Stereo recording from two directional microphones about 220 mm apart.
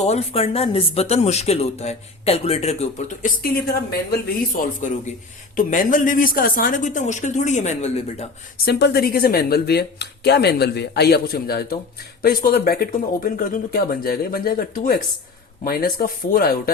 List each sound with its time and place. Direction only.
0.0 s speech: 30° left (ahead or behind)
4.8 s speech: 35° left (ahead or behind)
8.6 s speech: 45° left (ahead or behind)